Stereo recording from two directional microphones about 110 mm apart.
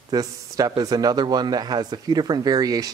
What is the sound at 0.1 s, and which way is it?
A man's voice, 35° right (ahead or behind).